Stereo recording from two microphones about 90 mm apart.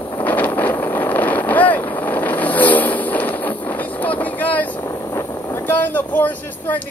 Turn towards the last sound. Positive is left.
turn(degrees=20)  # may be behind; listen again after turning